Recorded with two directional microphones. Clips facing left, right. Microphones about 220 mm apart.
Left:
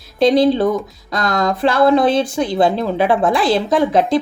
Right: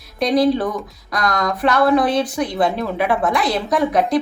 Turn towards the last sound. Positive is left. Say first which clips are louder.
# left 3 dB
turn(degrees=30)  # may be behind; listen again after turning